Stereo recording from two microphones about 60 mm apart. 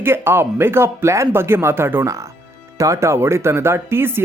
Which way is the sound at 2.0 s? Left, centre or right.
Right.